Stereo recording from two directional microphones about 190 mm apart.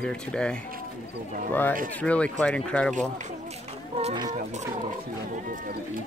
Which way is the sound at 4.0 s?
30° right (ahead or behind).